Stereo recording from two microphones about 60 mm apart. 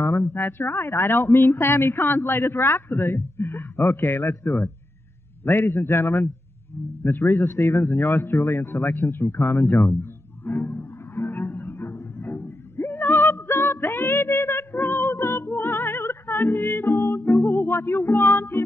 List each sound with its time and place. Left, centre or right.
0.0 s a woman's voice: left
7.0 s a sound: left
14.7 s music: left